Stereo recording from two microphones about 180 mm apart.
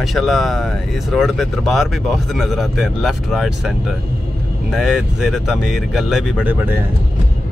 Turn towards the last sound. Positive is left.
turn(degrees=-10)  # may be behind; listen again after turning